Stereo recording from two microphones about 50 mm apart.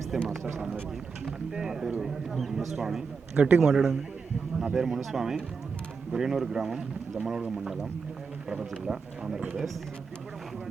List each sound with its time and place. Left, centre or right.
0.1 s speech: centre
3.4 s a man's voice: right
3.7 s speech: centre